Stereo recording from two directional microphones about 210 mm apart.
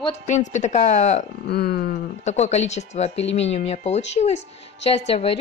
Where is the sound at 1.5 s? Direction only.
50° left (ahead or behind).